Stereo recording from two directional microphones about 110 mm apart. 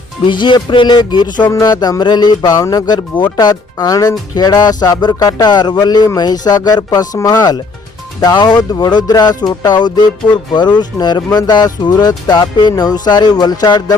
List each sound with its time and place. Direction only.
0.3 s music: 45° left (ahead or behind)
1.5 s speech: 40° left (ahead or behind)